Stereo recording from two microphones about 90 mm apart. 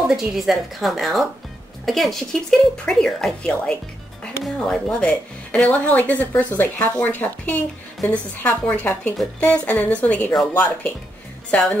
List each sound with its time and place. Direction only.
0.1 s a woman's voice: 5° right (ahead or behind); by 11.7 s 15° left (ahead or behind)